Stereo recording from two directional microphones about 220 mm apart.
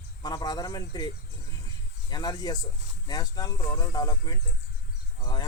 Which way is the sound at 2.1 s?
20° left (ahead or behind).